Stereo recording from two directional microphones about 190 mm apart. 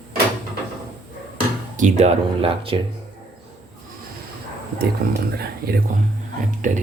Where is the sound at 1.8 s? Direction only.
35° right (ahead or behind).